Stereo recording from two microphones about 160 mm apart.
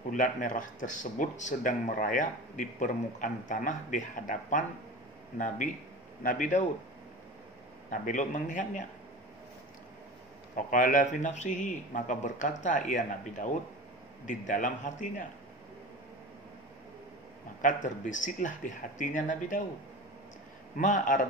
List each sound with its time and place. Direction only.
0.1 s speech: 55° left (ahead or behind)
6.2 s speech: 55° left (ahead or behind)
7.9 s speech: 55° left (ahead or behind)
10.5 s speech: 55° left (ahead or behind)
17.6 s speech: 55° left (ahead or behind)
20.7 s speech: 50° left (ahead or behind)